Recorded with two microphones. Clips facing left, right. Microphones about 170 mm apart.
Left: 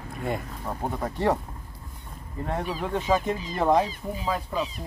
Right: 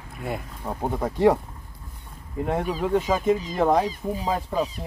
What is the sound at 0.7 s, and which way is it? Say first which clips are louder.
Speech: right 2 dB; 25° right (ahead or behind).